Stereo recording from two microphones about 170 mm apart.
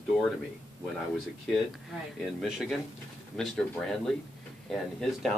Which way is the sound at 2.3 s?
5° right (ahead or behind).